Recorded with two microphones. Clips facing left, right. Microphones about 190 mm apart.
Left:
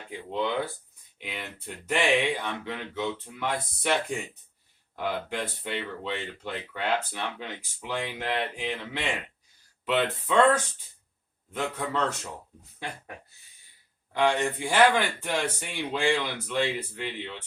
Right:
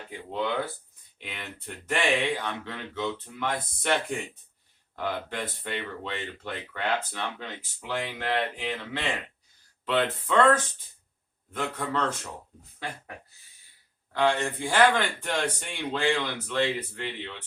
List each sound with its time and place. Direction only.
0.1 s speech: 15° left (ahead or behind)
4.9 s speech: 10° left (ahead or behind)
11.5 s speech: 10° left (ahead or behind)
14.1 s speech: 15° left (ahead or behind)